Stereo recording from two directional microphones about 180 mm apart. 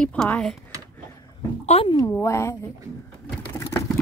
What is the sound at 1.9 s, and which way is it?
Speech, 15° left (ahead or behind).